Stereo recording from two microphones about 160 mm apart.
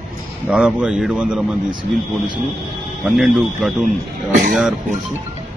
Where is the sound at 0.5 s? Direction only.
5° right (ahead or behind).